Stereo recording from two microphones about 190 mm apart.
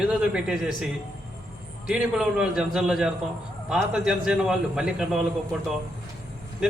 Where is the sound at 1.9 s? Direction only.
5° right (ahead or behind).